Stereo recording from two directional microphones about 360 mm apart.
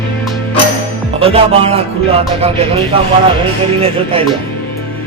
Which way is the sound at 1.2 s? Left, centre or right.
Centre.